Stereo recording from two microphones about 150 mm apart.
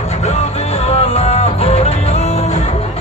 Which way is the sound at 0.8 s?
45° left (ahead or behind).